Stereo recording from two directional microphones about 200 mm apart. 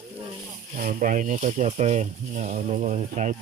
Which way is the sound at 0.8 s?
40° right (ahead or behind).